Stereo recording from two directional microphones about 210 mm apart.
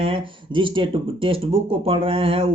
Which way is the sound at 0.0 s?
25° right (ahead or behind).